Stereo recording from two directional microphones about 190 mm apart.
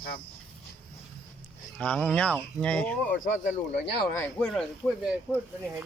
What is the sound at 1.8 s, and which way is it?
Speech, 5° left (ahead or behind).